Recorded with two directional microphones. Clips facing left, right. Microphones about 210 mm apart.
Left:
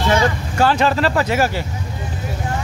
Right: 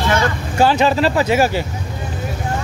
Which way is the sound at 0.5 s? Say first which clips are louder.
Right 3 dB; 25° right (ahead or behind).